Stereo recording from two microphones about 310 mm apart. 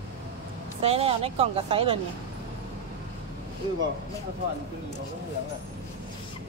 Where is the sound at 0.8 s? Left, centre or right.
Centre.